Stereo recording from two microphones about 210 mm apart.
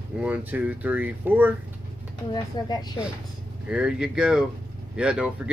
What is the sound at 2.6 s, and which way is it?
Speech, 20° left (ahead or behind).